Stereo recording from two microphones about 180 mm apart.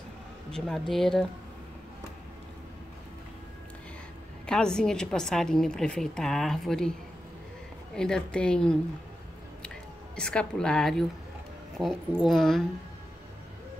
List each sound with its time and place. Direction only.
0.6 s a woman's voice: centre (ahead or behind)
4.5 s a woman's voice: 5° left (ahead or behind)
10.1 s a woman's voice: 5° left (ahead or behind)